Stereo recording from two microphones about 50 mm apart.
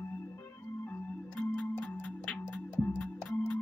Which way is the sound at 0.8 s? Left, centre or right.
Left.